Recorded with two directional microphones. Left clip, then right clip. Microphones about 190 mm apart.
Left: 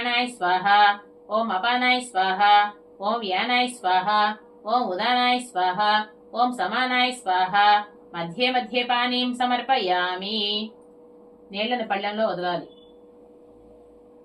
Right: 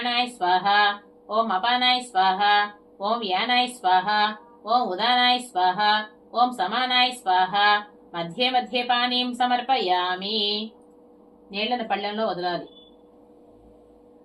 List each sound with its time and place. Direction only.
0.0 s music: 20° right (ahead or behind)
12.0 s speech: 15° right (ahead or behind)